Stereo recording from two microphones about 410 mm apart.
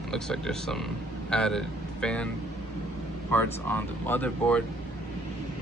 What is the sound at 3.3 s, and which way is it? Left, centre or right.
Speech, centre.